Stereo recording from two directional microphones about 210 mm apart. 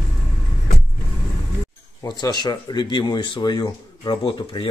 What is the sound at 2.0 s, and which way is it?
Speech, 20° left (ahead or behind).